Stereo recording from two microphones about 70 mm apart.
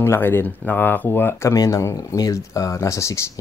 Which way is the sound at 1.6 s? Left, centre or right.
Left.